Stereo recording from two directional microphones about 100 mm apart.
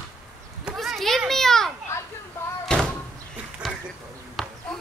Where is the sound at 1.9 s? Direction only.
30° left (ahead or behind).